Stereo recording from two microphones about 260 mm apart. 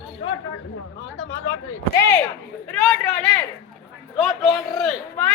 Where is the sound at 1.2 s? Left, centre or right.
Left.